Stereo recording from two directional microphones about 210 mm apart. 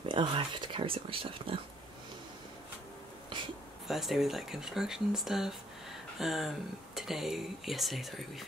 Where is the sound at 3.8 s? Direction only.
Centre (ahead or behind).